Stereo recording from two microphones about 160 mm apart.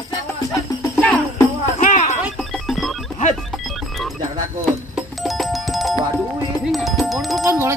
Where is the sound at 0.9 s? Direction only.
10° left (ahead or behind).